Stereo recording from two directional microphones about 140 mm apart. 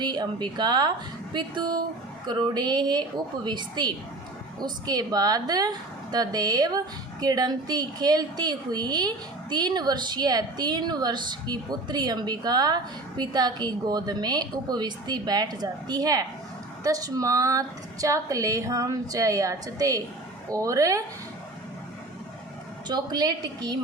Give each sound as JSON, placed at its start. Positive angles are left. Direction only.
{"t": 0.0, "sound": "a woman's voice", "side_deg": -30}
{"t": 22.9, "sound": "a woman's voice", "side_deg": -30}